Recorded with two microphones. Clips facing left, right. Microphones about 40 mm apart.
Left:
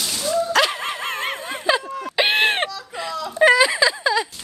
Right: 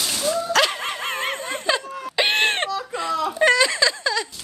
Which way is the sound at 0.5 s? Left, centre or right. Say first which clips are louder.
Left 1 dB; centre.